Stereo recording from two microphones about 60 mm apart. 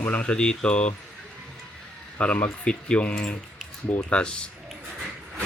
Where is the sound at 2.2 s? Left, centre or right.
Left.